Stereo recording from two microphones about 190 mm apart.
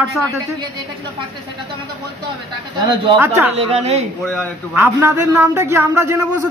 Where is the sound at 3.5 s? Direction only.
30° right (ahead or behind).